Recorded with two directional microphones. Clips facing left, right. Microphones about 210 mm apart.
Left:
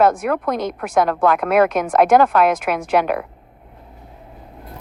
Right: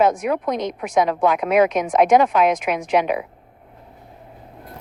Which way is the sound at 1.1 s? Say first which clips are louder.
Left 1 dB; 55° left (ahead or behind).